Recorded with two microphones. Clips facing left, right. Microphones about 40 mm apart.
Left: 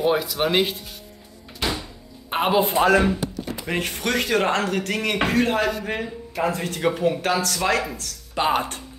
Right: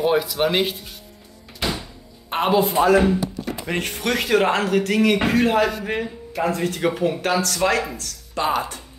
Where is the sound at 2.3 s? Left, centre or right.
Centre.